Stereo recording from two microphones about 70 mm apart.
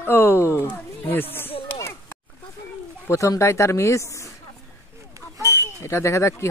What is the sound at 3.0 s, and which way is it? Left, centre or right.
Speech, left.